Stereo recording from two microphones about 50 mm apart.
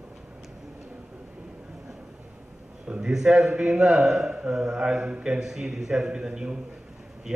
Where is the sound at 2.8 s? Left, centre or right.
Centre.